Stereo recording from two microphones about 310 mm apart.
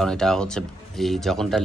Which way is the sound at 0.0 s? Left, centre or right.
Centre.